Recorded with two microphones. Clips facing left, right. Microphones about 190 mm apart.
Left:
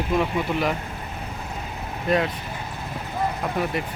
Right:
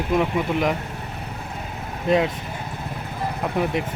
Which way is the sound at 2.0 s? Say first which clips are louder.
Right 3 dB; 20° right (ahead or behind).